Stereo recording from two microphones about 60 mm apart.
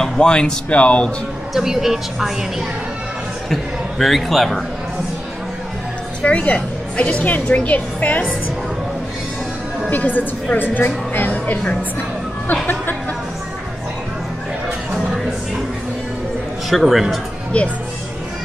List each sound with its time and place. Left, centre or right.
0.0 s speech: centre
1.5 s a woman's voice: centre
4.0 s a woman's voice: centre
6.2 s a woman's voice: left
9.8 s a woman's voice: left
16.7 s a woman's voice: centre